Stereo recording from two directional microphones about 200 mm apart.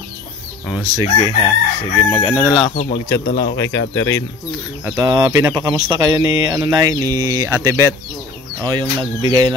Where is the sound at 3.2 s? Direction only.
55° left (ahead or behind).